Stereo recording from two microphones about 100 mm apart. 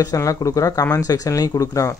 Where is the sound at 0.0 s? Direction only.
35° left (ahead or behind).